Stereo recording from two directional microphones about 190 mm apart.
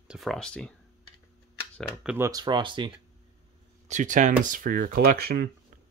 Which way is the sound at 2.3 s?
20° right (ahead or behind).